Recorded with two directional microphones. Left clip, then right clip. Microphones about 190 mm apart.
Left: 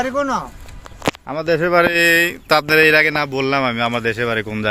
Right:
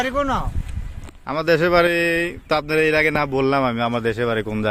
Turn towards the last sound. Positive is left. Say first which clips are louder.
# left 2 dB
turn(degrees=0)  # may be behind; listen again after turning